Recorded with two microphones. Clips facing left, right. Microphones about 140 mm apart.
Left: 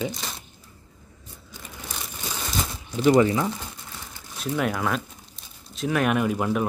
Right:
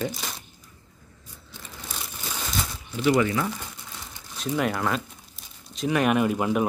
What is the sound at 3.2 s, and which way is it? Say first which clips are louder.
Speech: left 2 dB; 25° left (ahead or behind).